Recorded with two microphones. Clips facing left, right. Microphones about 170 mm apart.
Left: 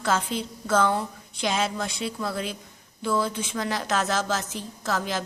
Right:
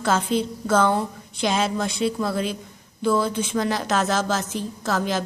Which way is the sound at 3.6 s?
35° right (ahead or behind).